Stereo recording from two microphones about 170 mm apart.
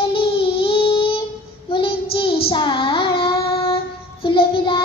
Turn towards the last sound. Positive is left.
turn(degrees=30)  # may be behind; listen again after turning